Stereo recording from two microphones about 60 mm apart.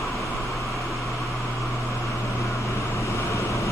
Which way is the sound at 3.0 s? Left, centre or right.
Left.